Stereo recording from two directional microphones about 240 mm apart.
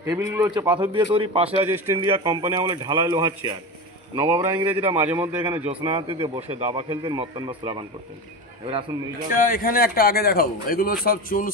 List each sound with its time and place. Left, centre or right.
0.0 s a man's voice: centre
5.7 s speech: right
9.3 s speech: left